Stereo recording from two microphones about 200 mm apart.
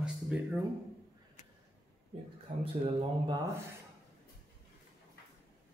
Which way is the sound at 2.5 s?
35° right (ahead or behind).